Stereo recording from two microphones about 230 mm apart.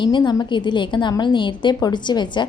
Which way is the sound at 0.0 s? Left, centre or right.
Centre.